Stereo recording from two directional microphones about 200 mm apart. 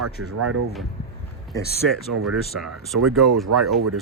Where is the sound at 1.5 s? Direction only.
15° left (ahead or behind).